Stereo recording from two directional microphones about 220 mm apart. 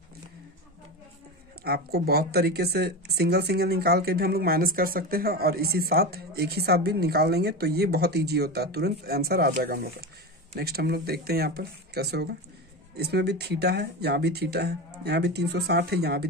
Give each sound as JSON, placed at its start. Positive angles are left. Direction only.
{"t": 1.6, "sound": "speech", "side_deg": -45}